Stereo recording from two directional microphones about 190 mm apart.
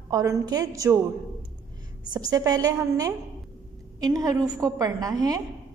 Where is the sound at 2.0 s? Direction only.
20° right (ahead or behind).